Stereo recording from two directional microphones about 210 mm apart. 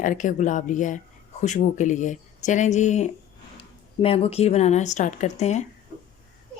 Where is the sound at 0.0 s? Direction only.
40° left (ahead or behind).